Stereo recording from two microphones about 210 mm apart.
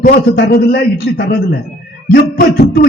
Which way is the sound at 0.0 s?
45° left (ahead or behind).